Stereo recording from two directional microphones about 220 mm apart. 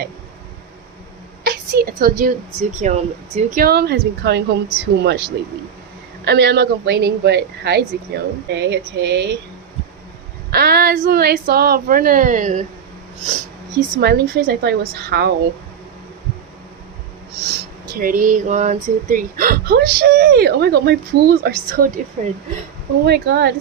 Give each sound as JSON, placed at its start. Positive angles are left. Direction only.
{"t": 1.5, "sound": "speech", "side_deg": -40}
{"t": 10.5, "sound": "a woman's voice", "side_deg": -45}
{"t": 13.7, "sound": "speech", "side_deg": -45}
{"t": 17.9, "sound": "speech", "side_deg": -40}
{"t": 23.0, "sound": "speech", "side_deg": -50}